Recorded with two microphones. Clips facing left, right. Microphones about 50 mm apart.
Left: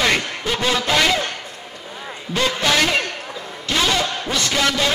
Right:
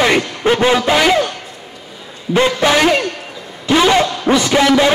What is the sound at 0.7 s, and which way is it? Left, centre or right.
Speech, centre.